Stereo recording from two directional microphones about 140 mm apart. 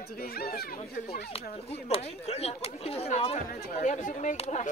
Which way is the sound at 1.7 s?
50° left (ahead or behind).